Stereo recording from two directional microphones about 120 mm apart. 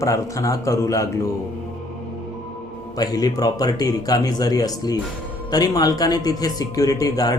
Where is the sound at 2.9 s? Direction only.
35° left (ahead or behind).